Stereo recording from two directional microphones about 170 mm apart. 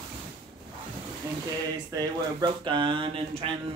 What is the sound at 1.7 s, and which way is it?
Speech, 20° right (ahead or behind).